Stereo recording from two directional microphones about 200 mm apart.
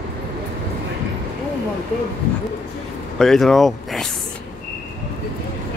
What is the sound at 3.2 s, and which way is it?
Speech, centre (ahead or behind).